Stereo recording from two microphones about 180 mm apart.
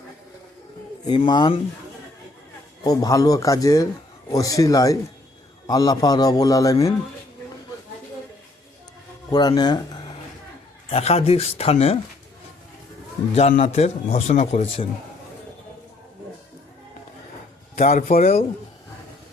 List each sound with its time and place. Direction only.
1.0 s a man's voice: 25° left (ahead or behind)
2.8 s a man's voice: 20° left (ahead or behind)
9.3 s a man's voice: 25° left (ahead or behind)
10.8 s speech: 35° left (ahead or behind)
13.6 s speech: 35° left (ahead or behind)
17.9 s a man's voice: 50° left (ahead or behind)